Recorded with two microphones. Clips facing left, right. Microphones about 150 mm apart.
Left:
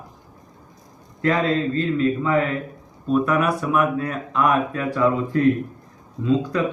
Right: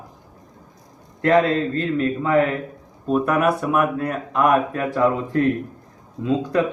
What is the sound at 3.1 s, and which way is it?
Speech, 45° right (ahead or behind).